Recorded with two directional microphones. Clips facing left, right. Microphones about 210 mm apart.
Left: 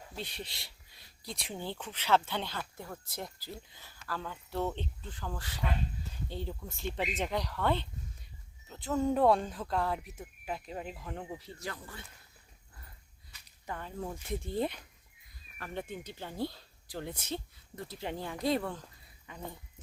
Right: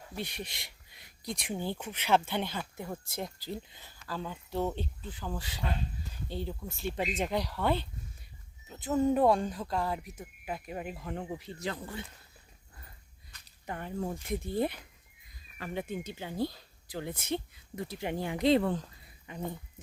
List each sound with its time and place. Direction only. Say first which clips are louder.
0.2 s speech: right 3 dB; 15° right (ahead or behind)
8.7 s a sound: right 2 dB; 15° right (ahead or behind)
9.0 s speech: right 1 dB; 10° right (ahead or behind)
13.7 s speech: right 4 dB; 20° right (ahead or behind)